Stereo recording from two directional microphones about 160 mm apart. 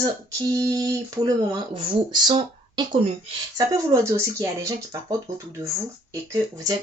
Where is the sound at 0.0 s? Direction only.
20° right (ahead or behind).